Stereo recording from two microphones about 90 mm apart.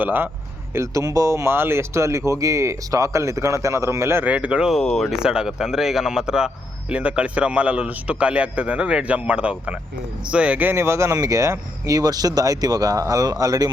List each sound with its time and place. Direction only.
0.0 s speech: 20° right (ahead or behind)
0.7 s speech: 35° right (ahead or behind)
4.3 s a man's voice: 15° right (ahead or behind)
4.7 s speech: 5° left (ahead or behind)
5.2 s a man's voice: 10° right (ahead or behind); by 13.7 s 45° right (ahead or behind)